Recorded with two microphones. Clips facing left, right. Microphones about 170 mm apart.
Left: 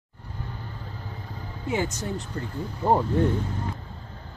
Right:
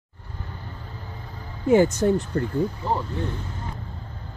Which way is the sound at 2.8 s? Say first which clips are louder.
Left 4 dB; 50° left (ahead or behind).